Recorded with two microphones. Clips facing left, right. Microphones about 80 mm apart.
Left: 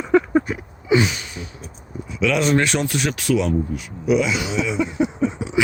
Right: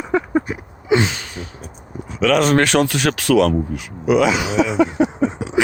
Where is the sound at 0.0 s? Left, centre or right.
Centre.